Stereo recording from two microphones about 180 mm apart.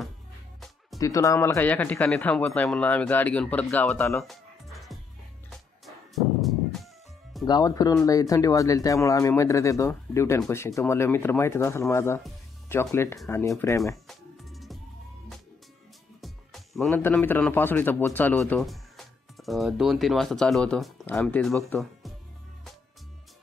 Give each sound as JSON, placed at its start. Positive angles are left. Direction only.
{"t": 0.9, "sound": "speech", "side_deg": 20}
{"t": 4.2, "sound": "music", "side_deg": 0}
{"t": 7.4, "sound": "speech", "side_deg": 20}
{"t": 14.0, "sound": "music", "side_deg": 0}
{"t": 16.2, "sound": "music", "side_deg": 0}
{"t": 16.9, "sound": "speech", "side_deg": 10}